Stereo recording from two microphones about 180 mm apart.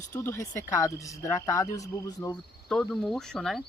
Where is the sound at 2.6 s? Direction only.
5° left (ahead or behind).